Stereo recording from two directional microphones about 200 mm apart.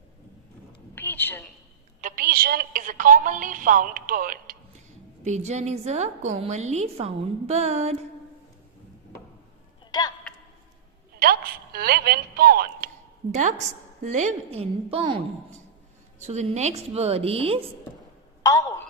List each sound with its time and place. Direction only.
0.9 s a sound: 10° left (ahead or behind)
2.0 s a woman's voice: 45° right (ahead or behind)
5.2 s a woman's voice: 35° right (ahead or behind)
11.2 s a woman's voice: 50° right (ahead or behind)
14.0 s a woman's voice: 35° right (ahead or behind)
18.4 s a woman's voice: 20° left (ahead or behind)